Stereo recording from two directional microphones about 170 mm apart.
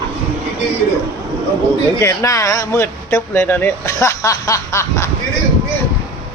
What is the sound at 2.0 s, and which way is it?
Speech, 15° left (ahead or behind).